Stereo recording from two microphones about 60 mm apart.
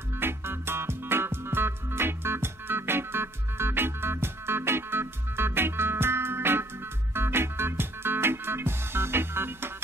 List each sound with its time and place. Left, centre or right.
0.2 s music: right